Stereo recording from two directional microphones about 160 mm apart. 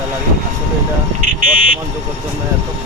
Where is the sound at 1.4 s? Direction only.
55° right (ahead or behind).